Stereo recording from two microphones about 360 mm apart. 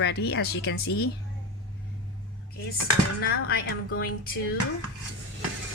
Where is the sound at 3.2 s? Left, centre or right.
Left.